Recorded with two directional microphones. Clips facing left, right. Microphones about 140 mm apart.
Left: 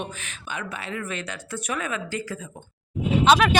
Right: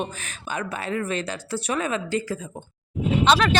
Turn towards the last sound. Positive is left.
turn(degrees=5)  # may be behind; listen again after turning